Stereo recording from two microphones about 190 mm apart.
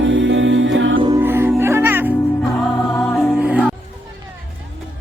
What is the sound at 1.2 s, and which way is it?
Music, 10° right (ahead or behind).